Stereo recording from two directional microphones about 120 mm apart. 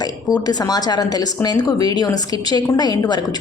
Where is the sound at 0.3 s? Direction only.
30° left (ahead or behind).